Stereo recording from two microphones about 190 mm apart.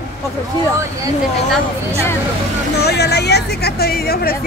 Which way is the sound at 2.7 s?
60° left (ahead or behind).